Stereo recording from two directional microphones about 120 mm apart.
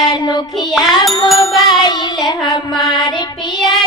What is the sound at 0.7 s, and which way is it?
Music, centre (ahead or behind).